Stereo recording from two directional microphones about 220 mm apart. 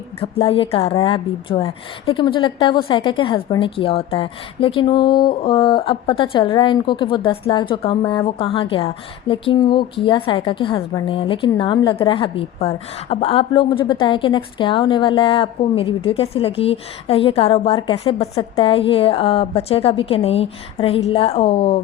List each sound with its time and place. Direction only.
0.2 s a woman's voice: 25° left (ahead or behind)